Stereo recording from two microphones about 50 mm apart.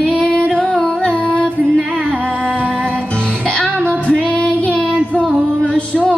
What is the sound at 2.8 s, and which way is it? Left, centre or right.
Music, right.